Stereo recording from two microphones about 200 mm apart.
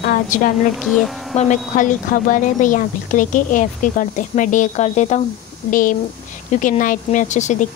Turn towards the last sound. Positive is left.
turn(degrees=35)  # may be behind; listen again after turning